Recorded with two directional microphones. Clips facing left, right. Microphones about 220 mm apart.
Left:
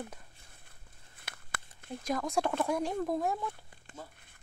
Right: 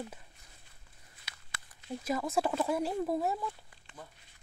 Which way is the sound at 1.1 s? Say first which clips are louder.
Left 6 dB; 55° left (ahead or behind).